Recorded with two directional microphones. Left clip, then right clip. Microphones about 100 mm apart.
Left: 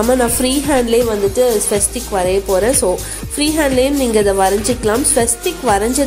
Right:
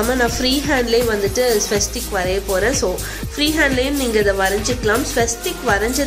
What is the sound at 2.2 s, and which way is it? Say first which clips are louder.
A woman's voice: left 4 dB; 35° left (ahead or behind).